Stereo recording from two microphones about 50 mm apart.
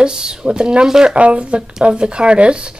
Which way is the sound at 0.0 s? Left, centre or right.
Centre.